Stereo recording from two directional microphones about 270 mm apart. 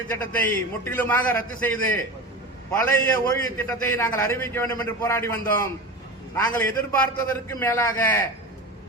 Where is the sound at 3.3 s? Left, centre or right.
Centre.